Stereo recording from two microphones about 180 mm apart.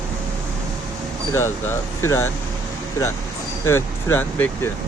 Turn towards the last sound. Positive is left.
turn(degrees=10)  # may be behind; listen again after turning